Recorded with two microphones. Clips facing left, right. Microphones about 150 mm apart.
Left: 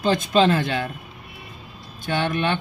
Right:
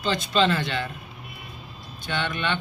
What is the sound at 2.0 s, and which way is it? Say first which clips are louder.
Speech: left 5 dB; 45° left (ahead or behind).